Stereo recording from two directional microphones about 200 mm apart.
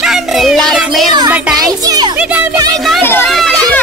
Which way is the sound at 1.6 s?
20° right (ahead or behind).